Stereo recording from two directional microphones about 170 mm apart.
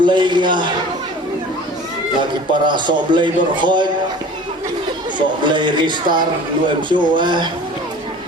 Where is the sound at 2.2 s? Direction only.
25° right (ahead or behind).